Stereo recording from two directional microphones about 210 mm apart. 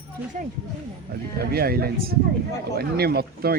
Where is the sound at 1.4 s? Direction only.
45° right (ahead or behind).